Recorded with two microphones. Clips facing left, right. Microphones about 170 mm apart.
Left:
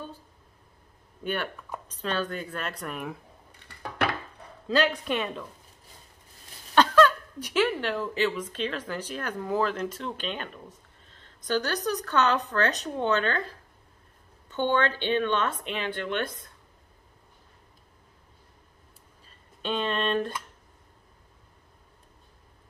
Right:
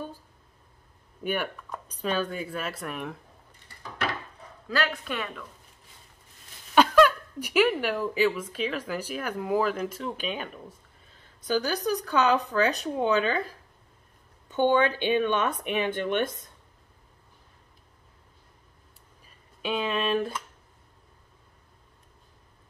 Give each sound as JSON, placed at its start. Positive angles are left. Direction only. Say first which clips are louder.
{"t": 1.2, "sound": "speech", "louder": "right 1 dB", "side_deg": -10}
{"t": 3.5, "sound": "a sound", "louder": "left 5 dB", "side_deg": 65}
{"t": 4.6, "sound": "speech", "louder": "left 4 dB", "side_deg": 20}
{"t": 6.7, "sound": "speech", "louder": "right 1 dB", "side_deg": -10}
{"t": 19.2, "sound": "speech", "louder": "even", "side_deg": -5}